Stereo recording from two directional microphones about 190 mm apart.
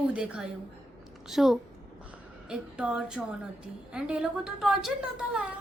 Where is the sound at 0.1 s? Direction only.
5° right (ahead or behind).